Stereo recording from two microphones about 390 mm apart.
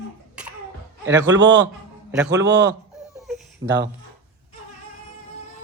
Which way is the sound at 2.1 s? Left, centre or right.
Centre.